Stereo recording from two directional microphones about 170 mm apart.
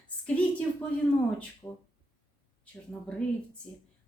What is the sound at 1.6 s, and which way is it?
A woman's voice, 15° left (ahead or behind).